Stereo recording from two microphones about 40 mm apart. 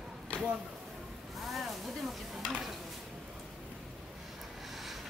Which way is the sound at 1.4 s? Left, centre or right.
Centre.